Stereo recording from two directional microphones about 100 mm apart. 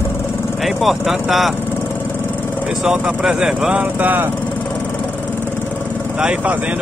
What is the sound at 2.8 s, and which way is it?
Speech, 10° right (ahead or behind).